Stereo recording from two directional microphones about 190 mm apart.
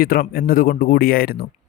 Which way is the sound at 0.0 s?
50° left (ahead or behind).